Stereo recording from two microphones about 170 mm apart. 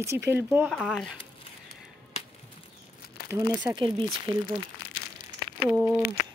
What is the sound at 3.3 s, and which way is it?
Speech, 20° right (ahead or behind).